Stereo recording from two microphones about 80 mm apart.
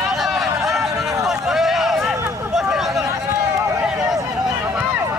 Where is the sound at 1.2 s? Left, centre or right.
Centre.